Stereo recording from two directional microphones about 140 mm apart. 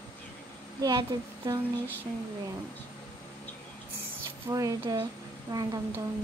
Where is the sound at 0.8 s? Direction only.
30° right (ahead or behind).